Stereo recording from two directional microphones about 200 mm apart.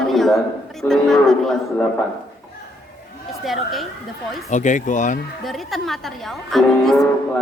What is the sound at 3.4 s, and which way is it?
Speech, centre (ahead or behind).